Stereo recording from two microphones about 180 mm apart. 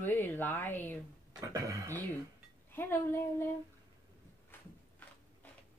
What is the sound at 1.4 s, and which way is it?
Speech, 20° right (ahead or behind).